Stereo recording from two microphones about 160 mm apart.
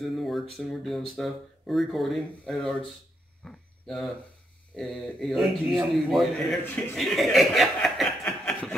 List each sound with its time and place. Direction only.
0.0 s speech: centre (ahead or behind)
3.4 s a sound: centre (ahead or behind)
4.7 s speech: centre (ahead or behind)
7.0 s chuckle: centre (ahead or behind)